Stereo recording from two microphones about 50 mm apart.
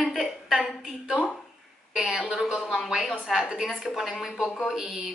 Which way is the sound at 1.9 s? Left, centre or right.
Centre.